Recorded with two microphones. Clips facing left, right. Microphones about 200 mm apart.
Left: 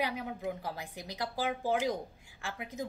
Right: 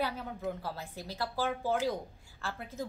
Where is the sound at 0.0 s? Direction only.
15° left (ahead or behind).